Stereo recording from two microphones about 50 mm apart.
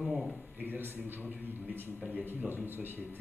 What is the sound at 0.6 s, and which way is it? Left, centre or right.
A man's voice, right.